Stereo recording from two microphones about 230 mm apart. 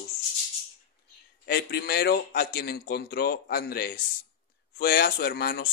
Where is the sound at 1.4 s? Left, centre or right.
Left.